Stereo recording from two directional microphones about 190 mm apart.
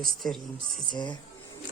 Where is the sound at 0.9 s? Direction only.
25° left (ahead or behind).